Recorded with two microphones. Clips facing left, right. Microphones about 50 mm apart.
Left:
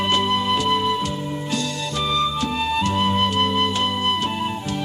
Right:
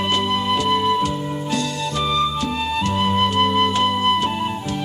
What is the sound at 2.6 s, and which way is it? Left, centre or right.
Music, centre.